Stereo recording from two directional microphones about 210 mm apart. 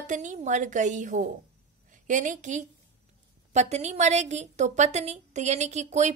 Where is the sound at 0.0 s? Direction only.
35° right (ahead or behind).